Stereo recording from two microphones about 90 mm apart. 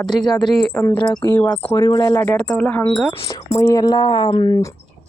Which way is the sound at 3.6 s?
35° left (ahead or behind).